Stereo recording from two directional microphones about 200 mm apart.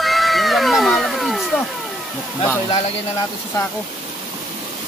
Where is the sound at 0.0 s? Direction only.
Centre (ahead or behind).